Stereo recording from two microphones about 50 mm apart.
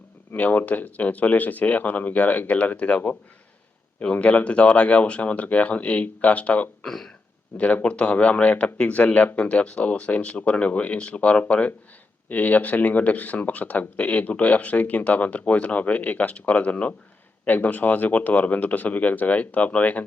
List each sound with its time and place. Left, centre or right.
0.3 s speech: left
4.0 s speech: left
6.8 s speech: centre
7.5 s speech: left